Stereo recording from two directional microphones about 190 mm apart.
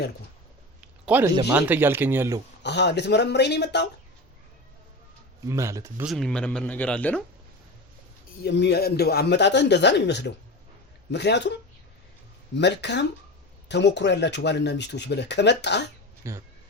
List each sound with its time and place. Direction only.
0.8 s a sound: 10° right (ahead or behind)
1.5 s speech: 10° right (ahead or behind)
2.6 s speech: 65° left (ahead or behind)
5.5 s speech: 15° right (ahead or behind)
6.1 s speech: centre (ahead or behind)
8.4 s speech: 65° left (ahead or behind)
12.5 s speech: 65° left (ahead or behind)
16.2 s speech: 15° right (ahead or behind)